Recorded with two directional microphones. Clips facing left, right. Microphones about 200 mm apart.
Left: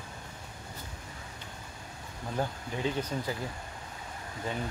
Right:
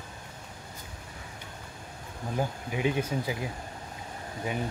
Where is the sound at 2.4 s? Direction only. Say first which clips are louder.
Right 3 dB; 15° right (ahead or behind).